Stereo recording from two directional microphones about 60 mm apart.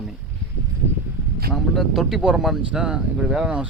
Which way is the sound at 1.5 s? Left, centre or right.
Centre.